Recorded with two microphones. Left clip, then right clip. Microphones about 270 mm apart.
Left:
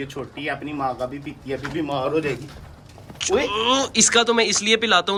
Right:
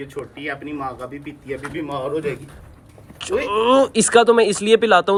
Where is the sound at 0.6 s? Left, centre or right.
Centre.